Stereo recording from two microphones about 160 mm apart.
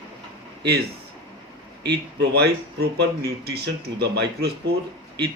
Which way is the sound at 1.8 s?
90° right.